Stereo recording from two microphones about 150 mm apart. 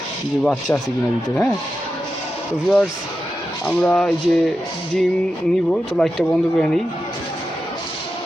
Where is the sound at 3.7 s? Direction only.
5° left (ahead or behind).